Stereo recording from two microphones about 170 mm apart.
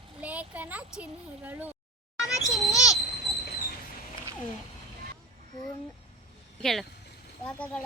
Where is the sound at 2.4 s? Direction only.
20° left (ahead or behind).